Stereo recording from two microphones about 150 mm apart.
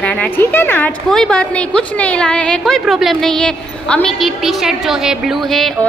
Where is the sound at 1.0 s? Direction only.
5° left (ahead or behind).